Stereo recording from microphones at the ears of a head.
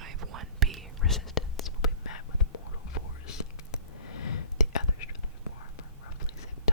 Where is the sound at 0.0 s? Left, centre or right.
Right.